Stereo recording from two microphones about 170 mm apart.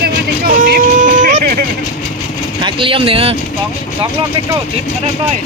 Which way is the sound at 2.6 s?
30° right (ahead or behind).